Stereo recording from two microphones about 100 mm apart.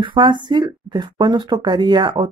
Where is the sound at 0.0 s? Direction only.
55° right (ahead or behind).